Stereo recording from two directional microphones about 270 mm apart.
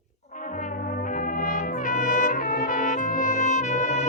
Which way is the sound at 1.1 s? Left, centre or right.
Left.